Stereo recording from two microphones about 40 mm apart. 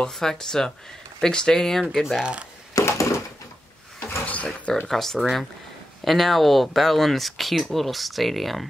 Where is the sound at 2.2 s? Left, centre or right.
Right.